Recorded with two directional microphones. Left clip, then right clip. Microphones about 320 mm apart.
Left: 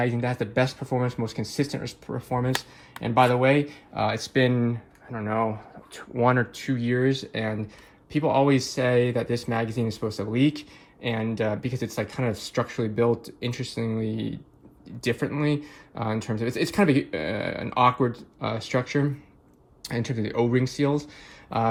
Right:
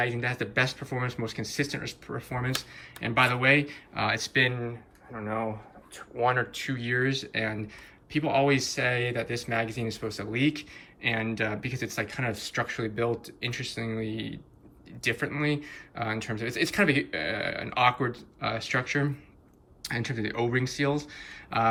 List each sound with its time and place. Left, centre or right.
0.0 s speech: centre
5.1 s speech: left
6.5 s speech: centre